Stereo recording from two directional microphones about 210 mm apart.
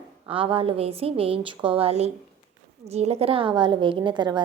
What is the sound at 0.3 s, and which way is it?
A woman's voice, 25° right (ahead or behind).